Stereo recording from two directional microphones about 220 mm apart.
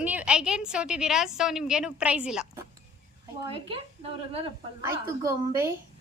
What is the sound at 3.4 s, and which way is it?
A woman's voice, 25° right (ahead or behind).